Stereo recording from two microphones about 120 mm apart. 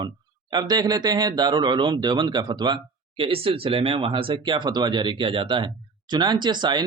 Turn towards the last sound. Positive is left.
turn(degrees=-40)  # may be behind; listen again after turning